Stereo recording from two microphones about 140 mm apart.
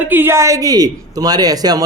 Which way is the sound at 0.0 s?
15° right (ahead or behind).